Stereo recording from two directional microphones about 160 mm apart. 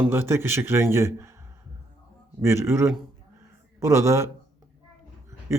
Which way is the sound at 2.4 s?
15° right (ahead or behind).